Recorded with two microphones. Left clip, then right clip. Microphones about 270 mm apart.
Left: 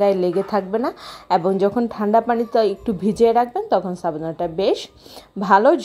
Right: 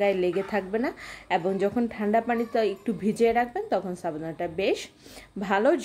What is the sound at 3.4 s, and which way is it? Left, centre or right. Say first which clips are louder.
A woman's voice: left 8 dB; centre.